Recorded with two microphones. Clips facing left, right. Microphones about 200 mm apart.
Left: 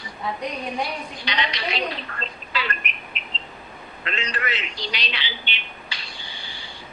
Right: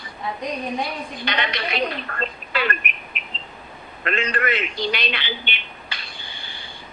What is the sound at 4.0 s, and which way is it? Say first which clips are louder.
A man's voice: right 6 dB; 55° right (ahead or behind).